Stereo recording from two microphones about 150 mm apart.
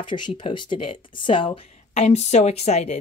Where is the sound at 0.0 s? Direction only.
30° left (ahead or behind).